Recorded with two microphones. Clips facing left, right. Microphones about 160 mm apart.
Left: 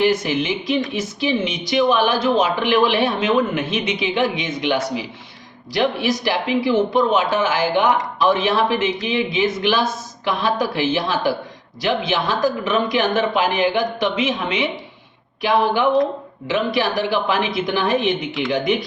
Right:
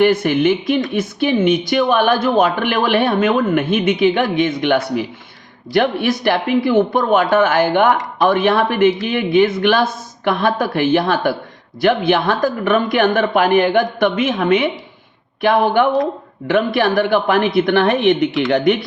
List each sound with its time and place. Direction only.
0.0 s speech: 55° right (ahead or behind)